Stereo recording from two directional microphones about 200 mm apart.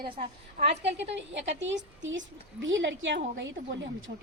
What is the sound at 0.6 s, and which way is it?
A woman's voice, 60° right (ahead or behind).